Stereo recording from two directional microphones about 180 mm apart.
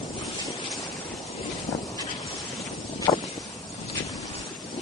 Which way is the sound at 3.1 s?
20° left (ahead or behind).